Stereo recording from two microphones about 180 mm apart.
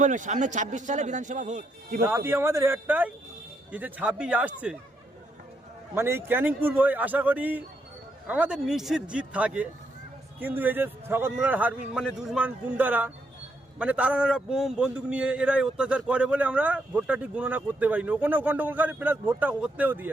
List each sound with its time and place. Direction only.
0.0 s a man's voice: 45° right (ahead or behind)
2.0 s a man's voice: 15° right (ahead or behind)
5.9 s a man's voice: 10° right (ahead or behind)